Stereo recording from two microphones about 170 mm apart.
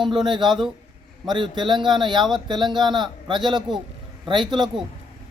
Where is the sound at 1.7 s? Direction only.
Centre (ahead or behind).